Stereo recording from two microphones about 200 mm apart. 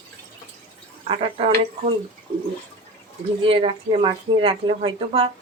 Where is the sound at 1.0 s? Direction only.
25° right (ahead or behind).